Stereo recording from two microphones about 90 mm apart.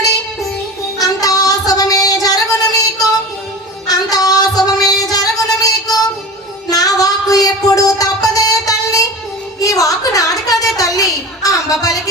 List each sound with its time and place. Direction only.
0.9 s child singing: 40° left (ahead or behind)
3.8 s music: 45° left (ahead or behind)
9.6 s a sound: 40° left (ahead or behind)